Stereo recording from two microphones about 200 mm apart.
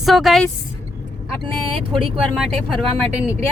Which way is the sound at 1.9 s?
Centre (ahead or behind).